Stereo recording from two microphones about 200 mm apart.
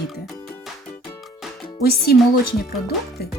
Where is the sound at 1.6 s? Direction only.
50° left (ahead or behind).